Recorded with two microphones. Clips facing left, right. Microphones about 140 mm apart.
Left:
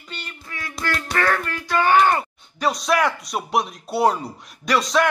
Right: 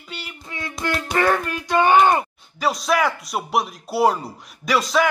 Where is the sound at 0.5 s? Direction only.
20° right (ahead or behind).